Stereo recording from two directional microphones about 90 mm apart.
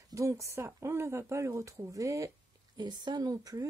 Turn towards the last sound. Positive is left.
turn(degrees=-45)  # may be behind; listen again after turning